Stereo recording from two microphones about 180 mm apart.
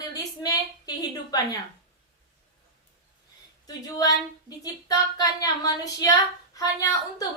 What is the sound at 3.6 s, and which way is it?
Speech, 20° left (ahead or behind).